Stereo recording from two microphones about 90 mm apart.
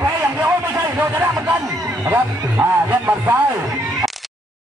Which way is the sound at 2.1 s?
20° right (ahead or behind).